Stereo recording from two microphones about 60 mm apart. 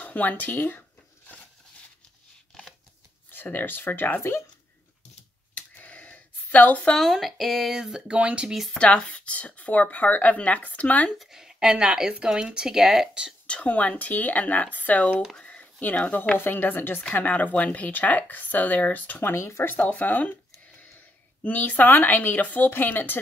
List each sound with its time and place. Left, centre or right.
0.0 s speech: left
3.5 s speech: left
4.2 s speech: left
5.5 s a sound: left
7.0 s speech: centre
8.1 s speech: right
8.7 s speech: centre
11.2 s a woman's voice: centre
13.5 s speech: left
16.3 s speech: left
19.3 s a woman's voice: left